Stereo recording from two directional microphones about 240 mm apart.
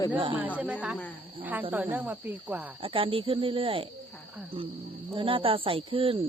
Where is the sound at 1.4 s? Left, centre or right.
Centre.